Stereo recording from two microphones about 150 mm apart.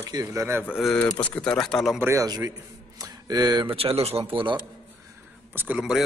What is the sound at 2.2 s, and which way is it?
Speech, 25° right (ahead or behind).